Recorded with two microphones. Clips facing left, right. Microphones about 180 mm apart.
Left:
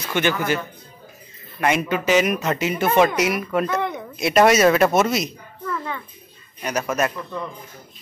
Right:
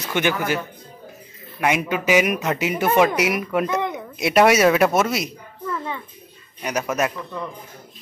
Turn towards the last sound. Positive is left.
turn(degrees=-5)  # may be behind; listen again after turning